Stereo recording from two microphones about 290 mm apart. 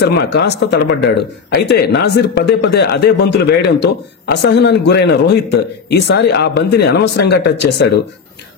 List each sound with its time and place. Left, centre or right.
0.0 s speech: left